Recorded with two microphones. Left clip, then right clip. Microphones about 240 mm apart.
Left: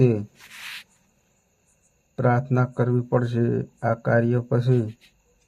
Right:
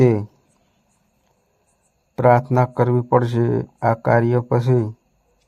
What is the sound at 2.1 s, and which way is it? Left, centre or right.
Speech, right.